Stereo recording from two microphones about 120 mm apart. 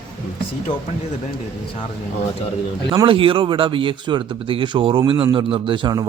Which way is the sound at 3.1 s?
45° right (ahead or behind).